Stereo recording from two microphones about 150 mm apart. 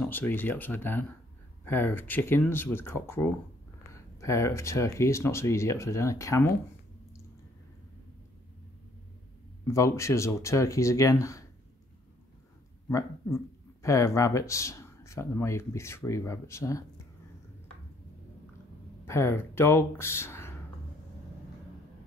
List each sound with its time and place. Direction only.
0.0 s speech: 10° left (ahead or behind)
9.7 s speech: 20° left (ahead or behind)
12.8 s speech: 20° left (ahead or behind)
19.0 s speech: 15° left (ahead or behind)